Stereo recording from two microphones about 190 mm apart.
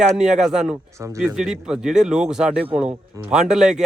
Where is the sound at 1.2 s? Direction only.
5° right (ahead or behind).